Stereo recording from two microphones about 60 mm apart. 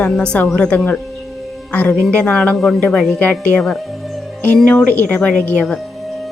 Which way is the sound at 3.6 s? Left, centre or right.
Centre.